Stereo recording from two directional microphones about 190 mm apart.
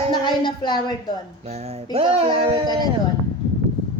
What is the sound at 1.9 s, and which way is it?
Speech, 30° right (ahead or behind).